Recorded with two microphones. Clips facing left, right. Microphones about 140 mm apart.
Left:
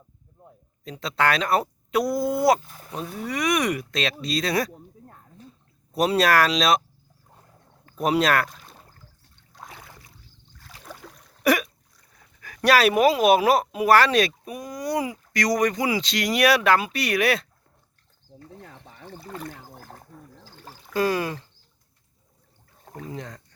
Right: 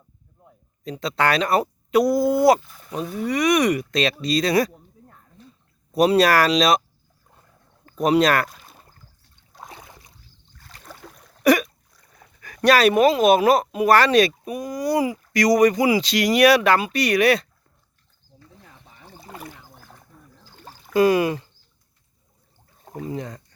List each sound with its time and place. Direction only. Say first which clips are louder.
0.9 s speech: right 2 dB; centre (ahead or behind)
5.9 s speech: right 4 dB; centre (ahead or behind)
7.9 s boat: right 4 dB; 5° left (ahead or behind)
9.6 s boat: right 2 dB; 20° right (ahead or behind)
10.6 s rowboat: left 1 dB; centre (ahead or behind)
11.4 s a sound: right 4 dB; 5° left (ahead or behind)
12.2 s dog: right 7 dB; 60° right (ahead or behind)
12.6 s speech: right 2 dB; 5° left (ahead or behind)
18.3 s mechanisms: left 6 dB; 55° left (ahead or behind)
19.0 s boat: left 3 dB; 10° right (ahead or behind)
19.5 s rowboat: left 4 dB; 45° left (ahead or behind)
20.9 s speech: right 6 dB; 15° right (ahead or behind)
22.9 s speech: right 6 dB; 10° right (ahead or behind)